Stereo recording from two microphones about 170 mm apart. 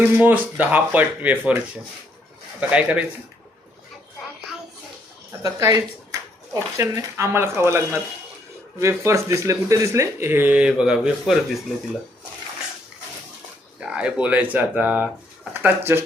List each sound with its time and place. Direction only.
0.0 s speech: 10° right (ahead or behind)
5.4 s speech: 20° right (ahead or behind); by 11.6 s centre (ahead or behind)
13.9 s speech: 5° right (ahead or behind)